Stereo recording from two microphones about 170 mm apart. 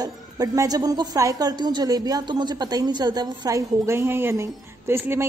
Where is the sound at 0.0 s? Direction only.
20° right (ahead or behind).